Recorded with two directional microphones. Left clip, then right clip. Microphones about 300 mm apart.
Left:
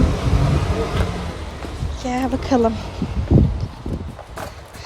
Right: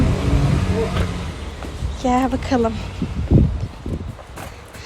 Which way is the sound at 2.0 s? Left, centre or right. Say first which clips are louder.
Right 4 dB; centre.